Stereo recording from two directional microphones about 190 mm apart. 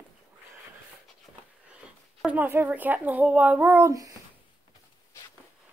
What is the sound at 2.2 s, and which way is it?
Speech, 10° right (ahead or behind).